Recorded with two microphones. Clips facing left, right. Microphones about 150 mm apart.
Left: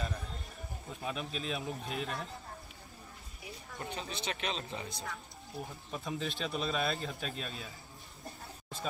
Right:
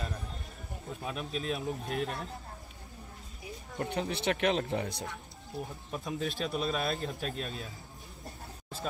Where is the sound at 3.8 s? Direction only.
70° right (ahead or behind).